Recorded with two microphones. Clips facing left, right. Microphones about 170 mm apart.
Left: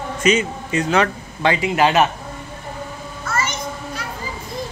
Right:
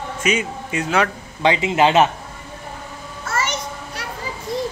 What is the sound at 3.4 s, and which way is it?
Children playing, 75° right (ahead or behind).